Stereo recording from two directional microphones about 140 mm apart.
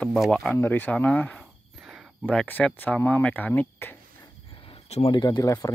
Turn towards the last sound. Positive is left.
turn(degrees=25)  # may be behind; listen again after turning